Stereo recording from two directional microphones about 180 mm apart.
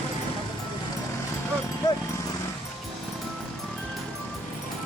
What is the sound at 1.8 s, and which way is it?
Dog, 20° left (ahead or behind).